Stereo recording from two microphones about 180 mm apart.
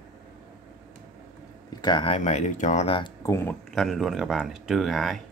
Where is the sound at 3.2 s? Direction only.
15° left (ahead or behind).